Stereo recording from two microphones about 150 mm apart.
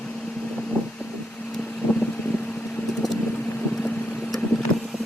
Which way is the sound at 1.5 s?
5° left (ahead or behind).